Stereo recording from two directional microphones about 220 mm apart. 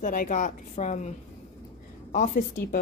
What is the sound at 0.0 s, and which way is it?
A woman's voice, 40° left (ahead or behind).